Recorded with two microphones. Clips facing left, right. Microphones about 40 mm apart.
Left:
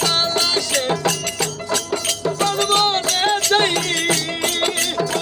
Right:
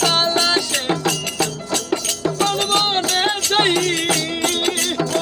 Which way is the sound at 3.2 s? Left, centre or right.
Centre.